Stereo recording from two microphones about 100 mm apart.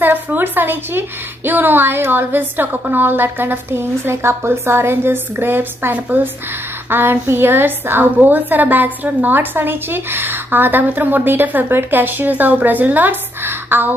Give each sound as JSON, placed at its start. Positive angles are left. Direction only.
{"t": 0.0, "sound": "a woman's voice", "side_deg": -20}